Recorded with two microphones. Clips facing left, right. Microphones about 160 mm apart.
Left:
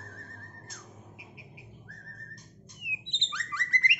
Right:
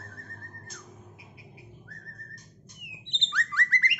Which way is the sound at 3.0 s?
15° left (ahead or behind).